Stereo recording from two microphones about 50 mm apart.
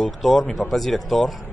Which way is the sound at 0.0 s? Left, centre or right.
Centre.